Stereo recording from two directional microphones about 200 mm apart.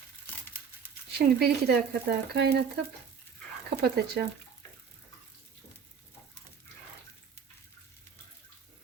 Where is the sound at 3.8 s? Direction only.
55° right (ahead or behind).